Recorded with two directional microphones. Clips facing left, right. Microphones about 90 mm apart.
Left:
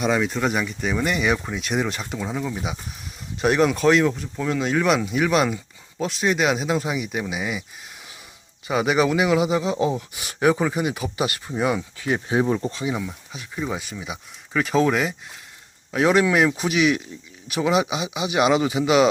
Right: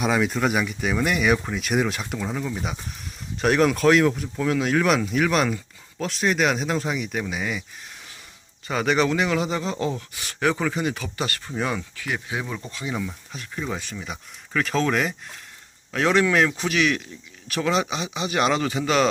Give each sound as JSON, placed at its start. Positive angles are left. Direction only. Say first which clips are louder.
{"t": 0.0, "sound": "speech", "louder": "even", "side_deg": 0}
{"t": 8.6, "sound": "speech", "louder": "left 2 dB", "side_deg": 10}
{"t": 11.9, "sound": "speech", "louder": "left 7 dB", "side_deg": 30}
{"t": 12.8, "sound": "speech", "louder": "left 3 dB", "side_deg": 10}